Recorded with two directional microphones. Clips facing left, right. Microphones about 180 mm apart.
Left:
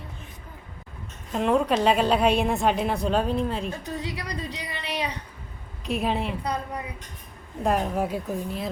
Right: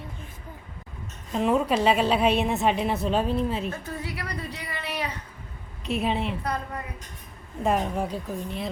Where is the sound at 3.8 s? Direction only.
20° left (ahead or behind).